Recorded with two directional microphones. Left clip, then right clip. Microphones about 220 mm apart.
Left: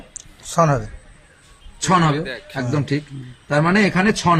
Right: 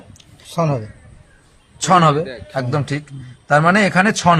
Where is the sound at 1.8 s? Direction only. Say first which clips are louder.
Right 5 dB; 55° right (ahead or behind).